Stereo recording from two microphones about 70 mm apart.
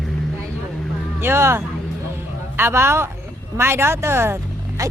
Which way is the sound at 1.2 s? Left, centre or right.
Right.